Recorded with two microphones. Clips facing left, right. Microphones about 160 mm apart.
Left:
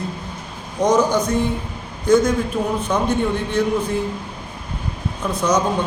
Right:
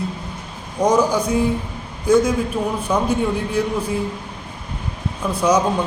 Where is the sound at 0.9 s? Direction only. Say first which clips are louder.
Even; 30° right (ahead or behind).